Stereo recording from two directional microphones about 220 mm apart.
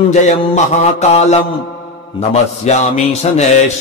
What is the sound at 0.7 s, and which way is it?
Speech, 30° left (ahead or behind).